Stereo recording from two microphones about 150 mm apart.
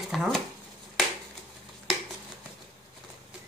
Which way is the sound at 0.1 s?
Centre (ahead or behind).